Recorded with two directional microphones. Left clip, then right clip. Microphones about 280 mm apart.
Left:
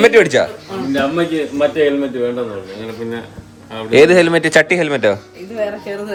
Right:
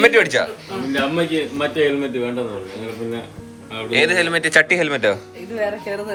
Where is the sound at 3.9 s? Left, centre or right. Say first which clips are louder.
Left 7 dB; left.